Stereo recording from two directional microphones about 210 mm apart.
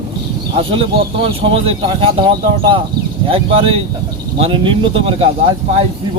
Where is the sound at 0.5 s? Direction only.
25° right (ahead or behind).